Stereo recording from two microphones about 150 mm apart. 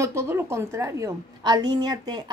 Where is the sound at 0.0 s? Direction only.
15° right (ahead or behind).